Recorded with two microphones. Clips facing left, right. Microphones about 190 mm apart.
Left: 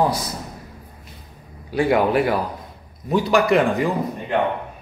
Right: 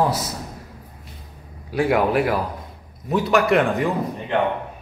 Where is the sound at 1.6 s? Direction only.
Centre (ahead or behind).